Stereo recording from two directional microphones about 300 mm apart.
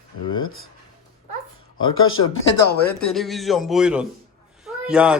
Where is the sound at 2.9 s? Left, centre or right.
Centre.